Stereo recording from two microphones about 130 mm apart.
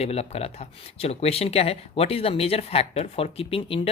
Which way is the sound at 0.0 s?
55° left (ahead or behind).